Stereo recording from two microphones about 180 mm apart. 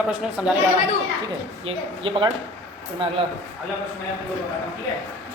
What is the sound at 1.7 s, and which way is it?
Speech, 30° right (ahead or behind).